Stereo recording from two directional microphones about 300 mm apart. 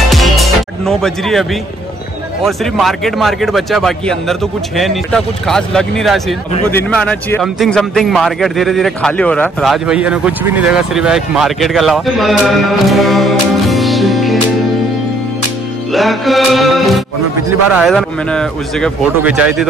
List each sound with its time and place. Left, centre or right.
0.1 s music: centre
2.4 s a man's voice: centre
15.9 s a man's voice: centre